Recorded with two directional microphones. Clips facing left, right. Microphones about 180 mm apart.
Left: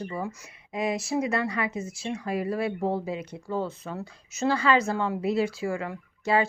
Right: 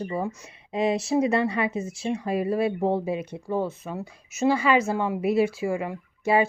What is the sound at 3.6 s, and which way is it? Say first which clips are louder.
Speech: right 3 dB; 10° right (ahead or behind).